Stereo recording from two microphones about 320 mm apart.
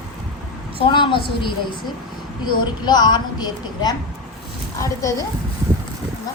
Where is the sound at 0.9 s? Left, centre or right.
Centre.